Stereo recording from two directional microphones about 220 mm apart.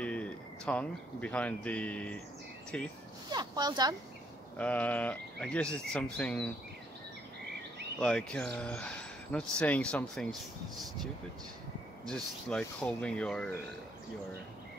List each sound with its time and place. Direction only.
0.0 s speech: 5° left (ahead or behind)
3.3 s speech: 20° right (ahead or behind)
4.6 s speech: 5° left (ahead or behind)
8.0 s speech: 5° left (ahead or behind)
12.1 s speech: 5° left (ahead or behind)